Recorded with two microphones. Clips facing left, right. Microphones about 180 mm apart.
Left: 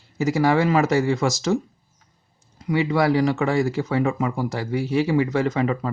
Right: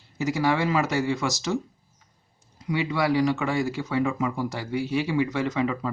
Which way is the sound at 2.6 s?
50° left (ahead or behind).